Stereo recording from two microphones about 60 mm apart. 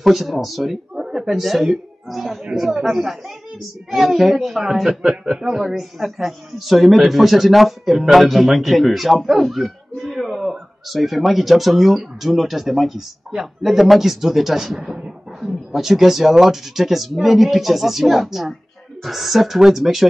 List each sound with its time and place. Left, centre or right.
0.0 s speech: centre